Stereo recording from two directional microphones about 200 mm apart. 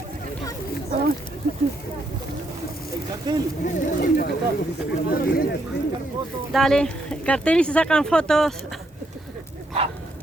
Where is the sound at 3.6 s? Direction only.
50° left (ahead or behind).